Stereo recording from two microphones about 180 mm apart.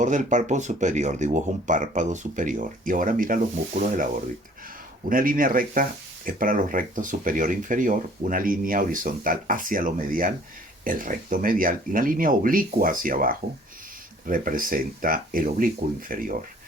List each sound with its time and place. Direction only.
0.0 s speech: 45° right (ahead or behind)